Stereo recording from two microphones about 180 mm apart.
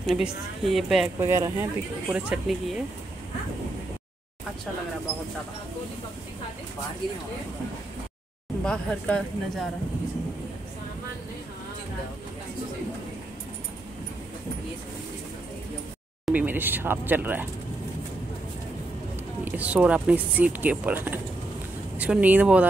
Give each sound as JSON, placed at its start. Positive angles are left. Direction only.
{"t": 0.0, "sound": "a woman's voice", "side_deg": 0}
{"t": 1.2, "sound": "speech", "side_deg": -15}
{"t": 2.1, "sound": "a woman's voice", "side_deg": -5}
{"t": 8.6, "sound": "a woman's voice", "side_deg": 5}
{"t": 16.3, "sound": "speech", "side_deg": -10}
{"t": 19.4, "sound": "speech", "side_deg": -10}